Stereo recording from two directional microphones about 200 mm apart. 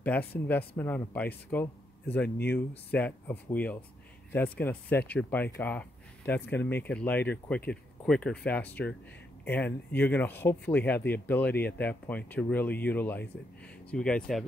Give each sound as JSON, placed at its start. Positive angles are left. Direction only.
{"t": 0.0, "sound": "speech", "side_deg": 10}
{"t": 2.2, "sound": "speech", "side_deg": 55}
{"t": 2.9, "sound": "speech", "side_deg": 10}